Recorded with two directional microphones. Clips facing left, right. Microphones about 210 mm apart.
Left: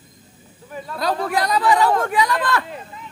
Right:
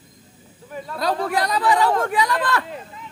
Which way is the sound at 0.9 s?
30° right (ahead or behind).